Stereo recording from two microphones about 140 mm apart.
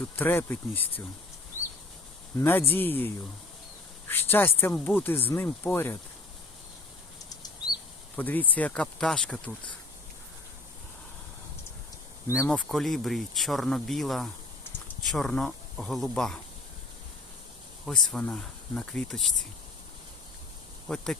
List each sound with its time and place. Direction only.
0.2 s speech: 15° left (ahead or behind)
2.4 s speech: 15° left (ahead or behind)
4.1 s speech: 15° left (ahead or behind)
7.3 s bird flight: 30° left (ahead or behind)
8.1 s speech: 10° left (ahead or behind)
12.5 s speech: 5° left (ahead or behind)
17.8 s speech: 5° left (ahead or behind)
20.8 s speech: 5° left (ahead or behind)